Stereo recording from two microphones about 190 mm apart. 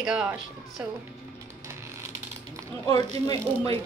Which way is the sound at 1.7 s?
15° right (ahead or behind).